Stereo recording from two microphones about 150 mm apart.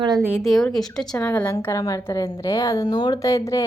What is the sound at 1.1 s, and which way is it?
A woman's voice, 15° left (ahead or behind).